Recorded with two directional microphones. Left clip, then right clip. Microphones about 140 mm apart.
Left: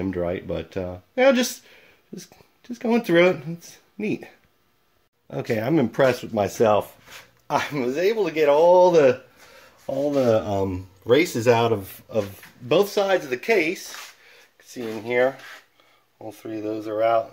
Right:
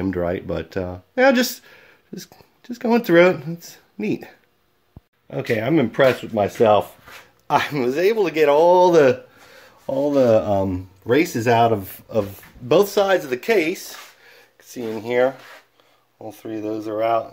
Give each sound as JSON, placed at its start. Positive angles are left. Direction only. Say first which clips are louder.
{"t": 0.0, "sound": "speech", "louder": "right 3 dB", "side_deg": -10}
{"t": 5.3, "sound": "speech", "louder": "right 3 dB", "side_deg": 10}
{"t": 7.4, "sound": "speech", "louder": "right 4 dB", "side_deg": -15}
{"t": 12.6, "sound": "speech", "louder": "right 4 dB", "side_deg": -20}